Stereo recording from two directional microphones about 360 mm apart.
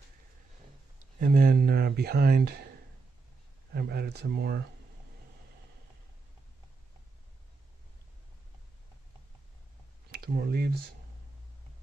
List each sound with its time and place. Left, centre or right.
1.2 s speech: right
3.7 s speech: right
10.1 s speech: right